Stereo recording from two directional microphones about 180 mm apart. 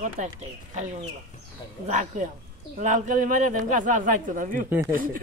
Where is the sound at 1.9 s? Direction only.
45° right (ahead or behind).